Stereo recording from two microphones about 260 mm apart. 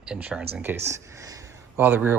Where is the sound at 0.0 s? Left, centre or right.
Centre.